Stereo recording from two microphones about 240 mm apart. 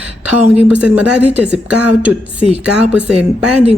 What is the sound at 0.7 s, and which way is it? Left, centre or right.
Speech, centre.